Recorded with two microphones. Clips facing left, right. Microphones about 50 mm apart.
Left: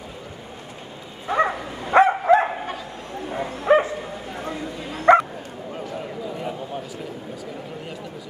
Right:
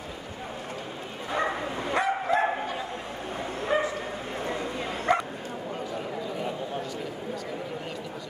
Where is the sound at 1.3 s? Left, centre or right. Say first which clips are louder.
Left 6 dB; left.